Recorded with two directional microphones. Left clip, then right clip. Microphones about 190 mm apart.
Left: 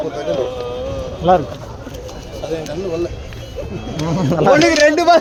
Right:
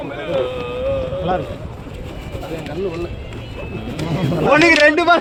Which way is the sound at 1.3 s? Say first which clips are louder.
Left 9 dB; 65° left (ahead or behind).